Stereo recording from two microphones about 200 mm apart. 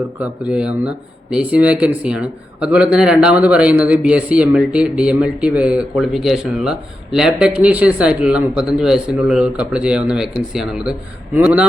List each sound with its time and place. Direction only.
0.2 s a man's voice: 5° right (ahead or behind)